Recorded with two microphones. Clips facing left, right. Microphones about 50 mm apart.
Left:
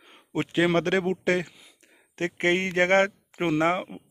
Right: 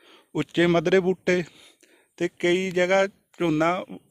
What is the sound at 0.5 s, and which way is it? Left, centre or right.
Speech, centre.